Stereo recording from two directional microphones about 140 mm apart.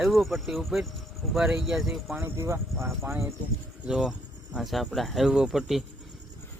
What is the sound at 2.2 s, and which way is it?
Speech, 15° right (ahead or behind).